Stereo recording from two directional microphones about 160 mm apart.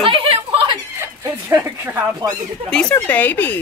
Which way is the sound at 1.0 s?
15° right (ahead or behind).